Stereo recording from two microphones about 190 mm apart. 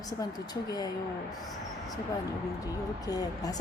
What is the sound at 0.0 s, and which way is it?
Speech, 20° left (ahead or behind).